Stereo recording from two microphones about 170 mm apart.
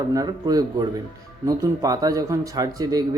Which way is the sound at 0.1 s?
20° right (ahead or behind).